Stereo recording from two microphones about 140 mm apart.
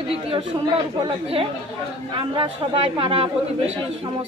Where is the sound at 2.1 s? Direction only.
40° right (ahead or behind).